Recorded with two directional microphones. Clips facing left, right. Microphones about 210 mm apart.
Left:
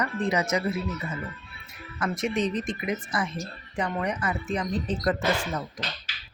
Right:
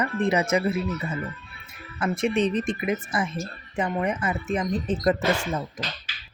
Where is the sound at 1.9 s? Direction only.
30° right (ahead or behind).